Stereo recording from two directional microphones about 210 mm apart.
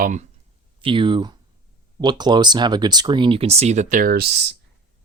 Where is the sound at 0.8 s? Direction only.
25° right (ahead or behind).